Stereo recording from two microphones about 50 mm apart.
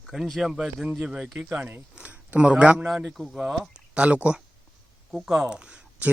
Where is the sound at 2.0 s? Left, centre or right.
Right.